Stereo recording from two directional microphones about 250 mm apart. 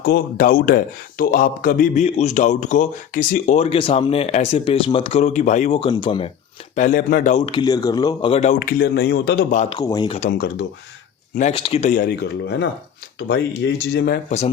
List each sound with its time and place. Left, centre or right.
0.0 s a man's voice: left; by 6.2 s centre
6.7 s a man's voice: left
9.7 s speech: centre
10.2 s speech: left
11.3 s a man's voice: left